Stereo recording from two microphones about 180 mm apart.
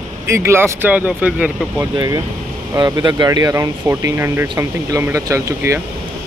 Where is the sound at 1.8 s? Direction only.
20° right (ahead or behind).